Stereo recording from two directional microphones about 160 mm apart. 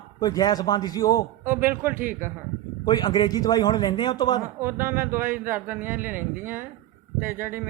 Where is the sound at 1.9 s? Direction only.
60° right (ahead or behind).